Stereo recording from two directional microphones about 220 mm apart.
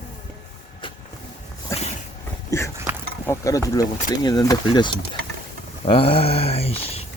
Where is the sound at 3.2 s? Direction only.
15° left (ahead or behind).